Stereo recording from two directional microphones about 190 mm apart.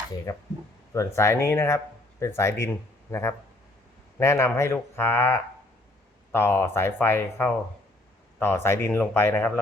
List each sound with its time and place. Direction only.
0.3 s speech: 20° left (ahead or behind)